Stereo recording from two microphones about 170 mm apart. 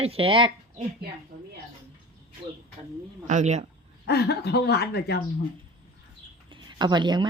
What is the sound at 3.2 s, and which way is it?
Speech, 45° right (ahead or behind).